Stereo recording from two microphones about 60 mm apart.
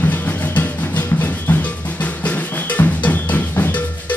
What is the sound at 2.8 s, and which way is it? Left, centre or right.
Drum, left.